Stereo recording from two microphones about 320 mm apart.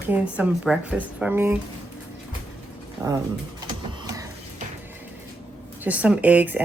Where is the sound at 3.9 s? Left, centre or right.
Centre.